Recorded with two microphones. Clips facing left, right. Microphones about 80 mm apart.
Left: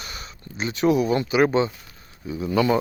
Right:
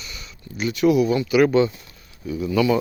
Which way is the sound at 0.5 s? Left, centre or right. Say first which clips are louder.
Right 2 dB; left.